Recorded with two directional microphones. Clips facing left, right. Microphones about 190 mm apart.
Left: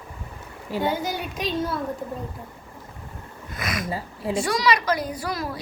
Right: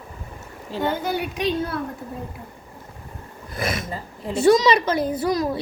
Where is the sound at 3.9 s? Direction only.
10° left (ahead or behind).